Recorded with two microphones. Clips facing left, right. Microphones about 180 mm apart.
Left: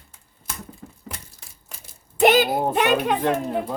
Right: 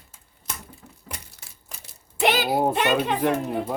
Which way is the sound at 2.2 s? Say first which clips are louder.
Left 6 dB; 45° left (ahead or behind).